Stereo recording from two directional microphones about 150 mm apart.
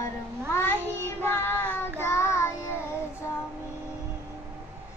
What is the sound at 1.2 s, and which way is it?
Child singing, 15° left (ahead or behind).